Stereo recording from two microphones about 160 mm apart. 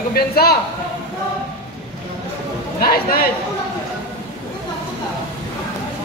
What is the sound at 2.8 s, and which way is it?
Speech, 70° left (ahead or behind).